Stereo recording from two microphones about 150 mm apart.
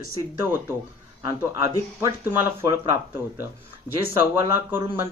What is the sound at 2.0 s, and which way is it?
Speech, 15° right (ahead or behind).